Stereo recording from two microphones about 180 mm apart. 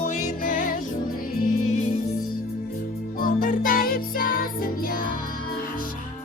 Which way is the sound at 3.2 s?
50° left (ahead or behind).